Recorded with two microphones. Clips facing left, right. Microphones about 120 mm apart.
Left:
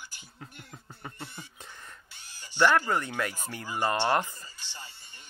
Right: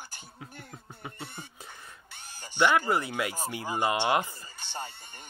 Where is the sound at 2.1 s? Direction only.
50° right (ahead or behind).